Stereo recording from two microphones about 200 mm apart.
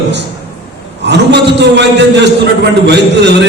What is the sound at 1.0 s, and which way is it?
A man's voice, 60° right (ahead or behind).